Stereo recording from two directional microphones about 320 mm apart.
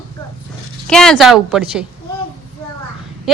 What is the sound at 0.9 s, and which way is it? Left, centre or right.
Speech, centre.